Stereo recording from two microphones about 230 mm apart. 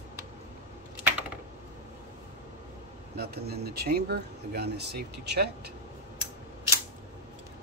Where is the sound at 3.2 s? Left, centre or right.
Right.